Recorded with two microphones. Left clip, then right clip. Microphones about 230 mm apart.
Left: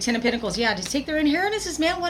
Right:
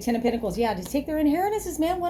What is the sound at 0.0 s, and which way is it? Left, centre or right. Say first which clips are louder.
A woman's voice: left 2 dB; centre.